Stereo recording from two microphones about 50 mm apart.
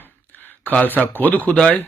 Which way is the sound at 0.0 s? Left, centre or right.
Left.